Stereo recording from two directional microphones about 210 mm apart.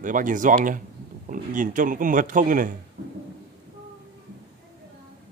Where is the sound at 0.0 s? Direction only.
40° right (ahead or behind).